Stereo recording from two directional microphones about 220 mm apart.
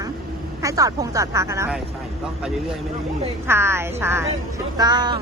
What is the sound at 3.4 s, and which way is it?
A woman's voice, 10° right (ahead or behind).